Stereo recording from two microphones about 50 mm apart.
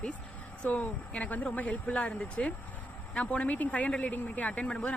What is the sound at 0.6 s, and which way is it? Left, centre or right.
Speech, left.